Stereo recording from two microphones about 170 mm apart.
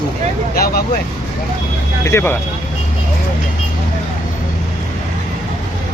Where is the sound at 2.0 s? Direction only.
15° left (ahead or behind).